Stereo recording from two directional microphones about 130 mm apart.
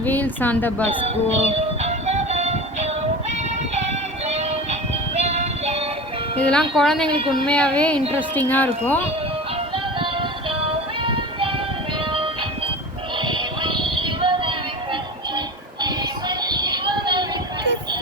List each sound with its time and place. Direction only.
0.0 s speech: 15° left (ahead or behind)
0.9 s music: 55° right (ahead or behind)
6.4 s speech: 5° left (ahead or behind)
9.7 s music: 40° right (ahead or behind)
13.1 s synthetic singing: 40° right (ahead or behind)
15.8 s music: 35° right (ahead or behind)